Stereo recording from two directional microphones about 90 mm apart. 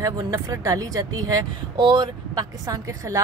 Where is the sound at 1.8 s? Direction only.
60° right (ahead or behind).